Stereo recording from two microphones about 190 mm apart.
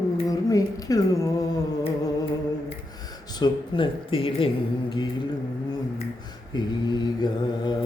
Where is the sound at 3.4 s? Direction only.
25° left (ahead or behind).